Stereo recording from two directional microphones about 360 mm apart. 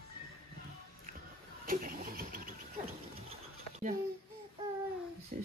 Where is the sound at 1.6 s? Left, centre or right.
Right.